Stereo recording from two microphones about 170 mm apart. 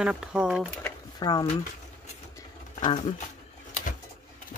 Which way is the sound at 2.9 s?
30° left (ahead or behind).